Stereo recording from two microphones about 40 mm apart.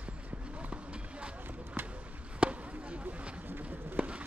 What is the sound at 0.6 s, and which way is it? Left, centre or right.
Run, right.